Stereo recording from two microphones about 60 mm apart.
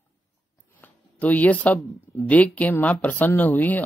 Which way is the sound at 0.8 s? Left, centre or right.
Left.